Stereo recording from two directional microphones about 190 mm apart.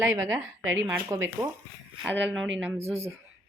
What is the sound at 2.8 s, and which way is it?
Speech, 35° right (ahead or behind).